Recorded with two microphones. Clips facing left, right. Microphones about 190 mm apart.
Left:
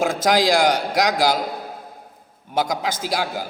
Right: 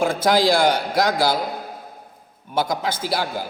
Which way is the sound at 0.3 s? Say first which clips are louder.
Even; 15° left (ahead or behind).